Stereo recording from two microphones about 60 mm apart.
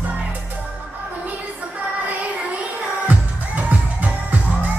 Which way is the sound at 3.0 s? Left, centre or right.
Right.